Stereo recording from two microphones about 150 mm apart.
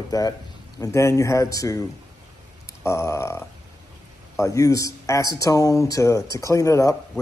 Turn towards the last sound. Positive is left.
turn(degrees=20)  # may be behind; listen again after turning